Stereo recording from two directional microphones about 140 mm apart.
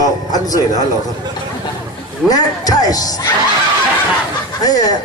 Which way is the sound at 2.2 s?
25° left (ahead or behind).